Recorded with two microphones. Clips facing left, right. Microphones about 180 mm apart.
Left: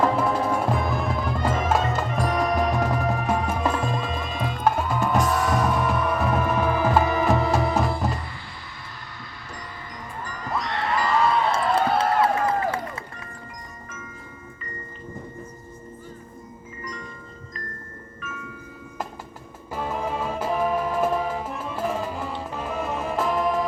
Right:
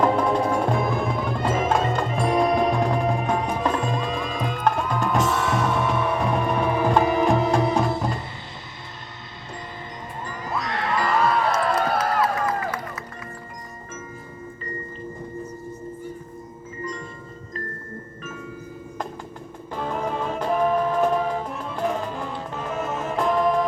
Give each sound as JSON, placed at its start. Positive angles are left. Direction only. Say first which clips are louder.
{"t": 0.0, "sound": "music", "louder": "right 2 dB", "side_deg": 5}
{"t": 2.2, "sound": "music", "louder": "right 5 dB", "side_deg": -25}
{"t": 2.5, "sound": "music", "louder": "right 2 dB", "side_deg": 0}
{"t": 5.2, "sound": "music", "louder": "even", "side_deg": -25}
{"t": 6.1, "sound": "music", "louder": "even", "side_deg": 5}
{"t": 10.5, "sound": "a sound", "louder": "even", "side_deg": 0}
{"t": 11.4, "sound": "a sound", "louder": "even", "side_deg": 25}
{"t": 18.2, "sound": "marimba", "louder": "left 1 dB", "side_deg": -30}
{"t": 19.7, "sound": "music", "louder": "right 1 dB", "side_deg": 5}